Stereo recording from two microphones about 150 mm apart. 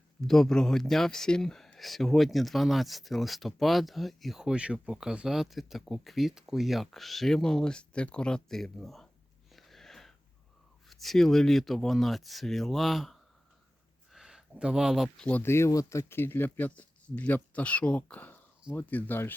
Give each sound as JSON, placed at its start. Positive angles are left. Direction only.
{"t": 0.2, "sound": "speech", "side_deg": 5}
{"t": 9.5, "sound": "sniff", "side_deg": 0}
{"t": 10.8, "sound": "speech", "side_deg": 0}
{"t": 15.3, "sound": "speech", "side_deg": 15}